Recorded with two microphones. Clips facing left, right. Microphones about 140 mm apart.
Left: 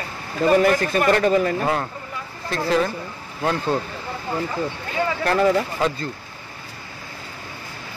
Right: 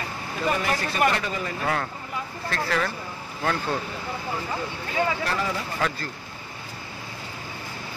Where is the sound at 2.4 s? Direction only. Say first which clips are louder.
Left 6 dB; 20° left (ahead or behind).